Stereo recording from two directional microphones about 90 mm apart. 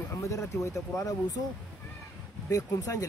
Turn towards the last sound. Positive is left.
turn(degrees=40)  # may be behind; listen again after turning